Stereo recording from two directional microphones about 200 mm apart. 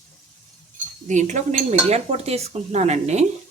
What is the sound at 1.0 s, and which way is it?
Speech, 35° right (ahead or behind).